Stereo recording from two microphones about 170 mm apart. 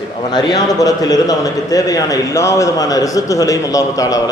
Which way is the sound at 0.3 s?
25° left (ahead or behind).